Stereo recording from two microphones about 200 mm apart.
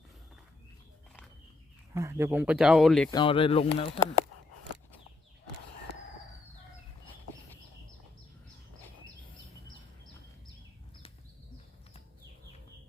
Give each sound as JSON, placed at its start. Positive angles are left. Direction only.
{"t": 2.0, "sound": "speech", "side_deg": -15}
{"t": 3.1, "sound": "speech", "side_deg": 25}